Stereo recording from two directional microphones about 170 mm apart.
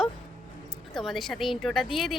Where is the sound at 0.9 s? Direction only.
Centre (ahead or behind).